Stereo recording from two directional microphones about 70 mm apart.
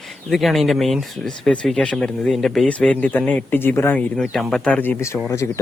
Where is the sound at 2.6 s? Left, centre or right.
Centre.